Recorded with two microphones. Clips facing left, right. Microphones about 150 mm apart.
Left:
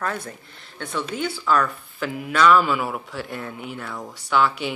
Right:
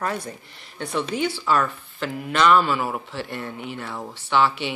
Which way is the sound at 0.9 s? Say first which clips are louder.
Right 2 dB; 25° right (ahead or behind).